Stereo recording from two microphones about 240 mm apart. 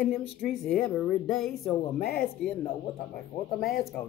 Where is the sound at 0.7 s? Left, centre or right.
Centre.